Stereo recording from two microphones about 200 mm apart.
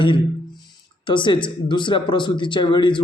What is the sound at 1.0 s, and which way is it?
Speech, 25° left (ahead or behind).